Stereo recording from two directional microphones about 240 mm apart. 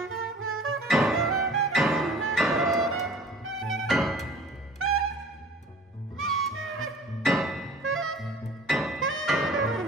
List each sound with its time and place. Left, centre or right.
0.0 s music: right
0.8 s music: centre
4.7 s music: right
6.1 s music: right
7.2 s music: centre
7.8 s music: right
8.6 s music: centre